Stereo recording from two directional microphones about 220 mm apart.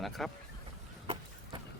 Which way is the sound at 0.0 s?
Centre (ahead or behind).